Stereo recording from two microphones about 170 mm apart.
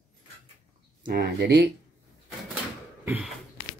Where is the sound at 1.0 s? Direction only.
70° right (ahead or behind).